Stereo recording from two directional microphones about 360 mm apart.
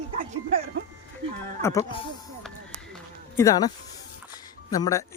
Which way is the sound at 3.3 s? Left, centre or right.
Centre.